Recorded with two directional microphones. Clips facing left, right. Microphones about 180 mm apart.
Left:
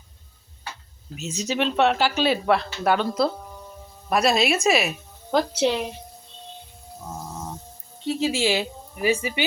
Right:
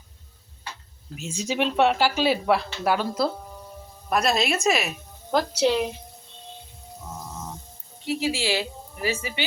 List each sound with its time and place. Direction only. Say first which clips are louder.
1.2 s a woman's voice: left 1 dB; 10° right (ahead or behind)
8.0 s a woman's voice: left 3 dB; 25° left (ahead or behind)